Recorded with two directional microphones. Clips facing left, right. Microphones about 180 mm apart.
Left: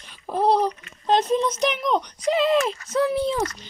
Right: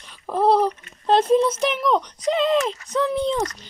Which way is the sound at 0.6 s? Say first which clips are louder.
Right 2 dB; 30° right (ahead or behind).